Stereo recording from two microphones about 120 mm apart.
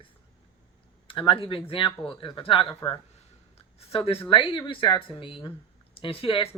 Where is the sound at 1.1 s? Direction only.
45° left (ahead or behind).